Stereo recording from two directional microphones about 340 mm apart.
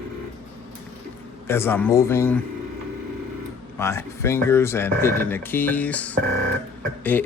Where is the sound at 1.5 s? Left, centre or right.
Centre.